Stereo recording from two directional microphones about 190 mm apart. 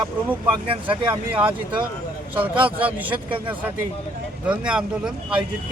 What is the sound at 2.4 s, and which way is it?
Speech, 10° right (ahead or behind).